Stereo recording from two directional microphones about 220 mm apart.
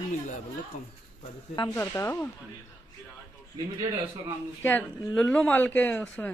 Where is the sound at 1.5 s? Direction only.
10° left (ahead or behind).